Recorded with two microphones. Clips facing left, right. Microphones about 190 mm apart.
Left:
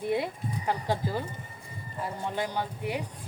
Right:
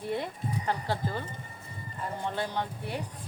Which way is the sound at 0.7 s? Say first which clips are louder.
Left 3 dB; 10° left (ahead or behind).